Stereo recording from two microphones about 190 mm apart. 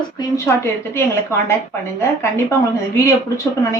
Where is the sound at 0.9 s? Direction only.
10° left (ahead or behind).